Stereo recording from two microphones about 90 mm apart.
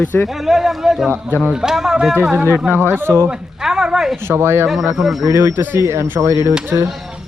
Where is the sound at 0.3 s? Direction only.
5° right (ahead or behind).